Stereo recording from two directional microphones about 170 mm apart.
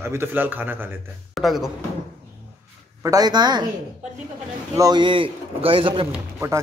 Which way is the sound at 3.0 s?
20° right (ahead or behind).